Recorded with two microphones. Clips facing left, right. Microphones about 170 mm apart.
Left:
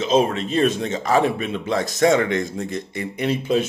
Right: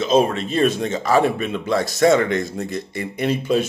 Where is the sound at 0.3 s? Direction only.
40° right (ahead or behind).